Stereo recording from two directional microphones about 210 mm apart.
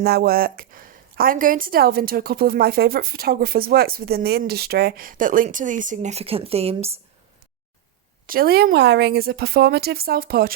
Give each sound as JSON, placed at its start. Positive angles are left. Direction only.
{"t": 0.0, "sound": "a woman's voice", "side_deg": -45}
{"t": 8.3, "sound": "a woman's voice", "side_deg": -45}